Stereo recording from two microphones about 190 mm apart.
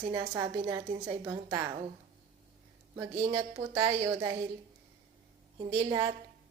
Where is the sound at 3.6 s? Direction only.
20° right (ahead or behind).